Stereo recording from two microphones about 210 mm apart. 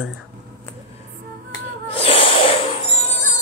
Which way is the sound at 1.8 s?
30° left (ahead or behind).